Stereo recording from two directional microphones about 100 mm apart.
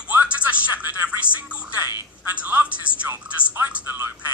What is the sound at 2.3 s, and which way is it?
Music, 15° right (ahead or behind).